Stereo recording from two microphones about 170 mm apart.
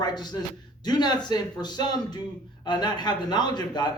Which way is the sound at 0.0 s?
25° left (ahead or behind).